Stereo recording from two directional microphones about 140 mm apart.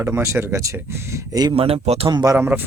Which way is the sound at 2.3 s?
15° right (ahead or behind).